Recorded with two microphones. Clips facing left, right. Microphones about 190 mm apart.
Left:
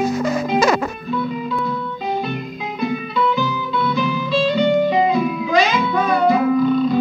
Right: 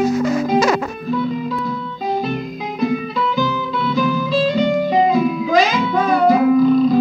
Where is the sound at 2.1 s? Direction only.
40° right (ahead or behind).